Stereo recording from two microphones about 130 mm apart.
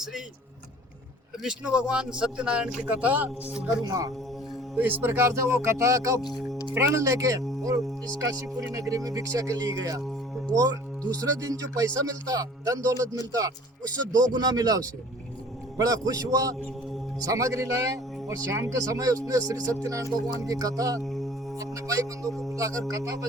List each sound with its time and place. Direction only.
1.5 s a man's voice: 5° right (ahead or behind)
3.8 s speech: 25° right (ahead or behind)
4.8 s speech: 15° right (ahead or behind)
6.2 s speech: centre (ahead or behind)
6.7 s speech: 20° right (ahead or behind)
15.8 s speech: 25° right (ahead or behind)
21.0 s mantra: centre (ahead or behind)
21.6 s speech: 25° right (ahead or behind)